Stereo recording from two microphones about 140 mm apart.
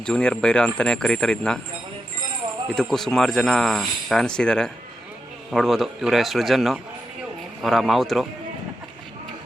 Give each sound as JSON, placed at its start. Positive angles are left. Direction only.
{"t": 0.0, "sound": "speech", "side_deg": 5}
{"t": 2.7, "sound": "speech", "side_deg": 0}